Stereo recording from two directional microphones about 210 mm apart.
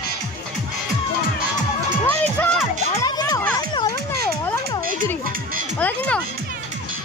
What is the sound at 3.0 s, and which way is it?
Music, 15° left (ahead or behind).